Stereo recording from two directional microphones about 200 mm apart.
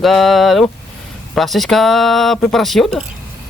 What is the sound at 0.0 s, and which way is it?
Speech, centre (ahead or behind).